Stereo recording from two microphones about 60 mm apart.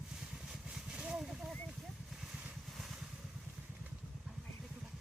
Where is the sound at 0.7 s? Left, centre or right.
Centre.